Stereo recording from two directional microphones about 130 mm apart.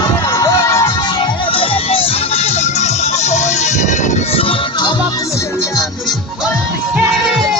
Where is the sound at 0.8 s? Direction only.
35° left (ahead or behind).